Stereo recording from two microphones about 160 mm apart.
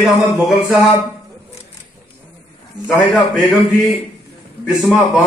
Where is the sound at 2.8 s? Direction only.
Centre (ahead or behind).